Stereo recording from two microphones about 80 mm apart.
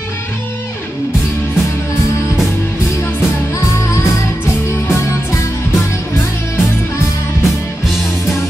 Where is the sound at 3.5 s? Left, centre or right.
Left.